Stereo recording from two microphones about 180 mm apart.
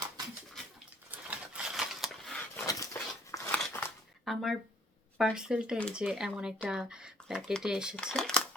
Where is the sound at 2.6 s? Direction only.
20° left (ahead or behind).